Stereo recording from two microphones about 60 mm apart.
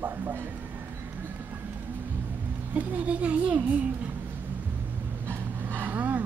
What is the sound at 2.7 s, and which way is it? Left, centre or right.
A child's voice, right.